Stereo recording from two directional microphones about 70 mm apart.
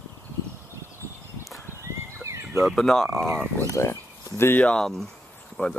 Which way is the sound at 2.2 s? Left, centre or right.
Right.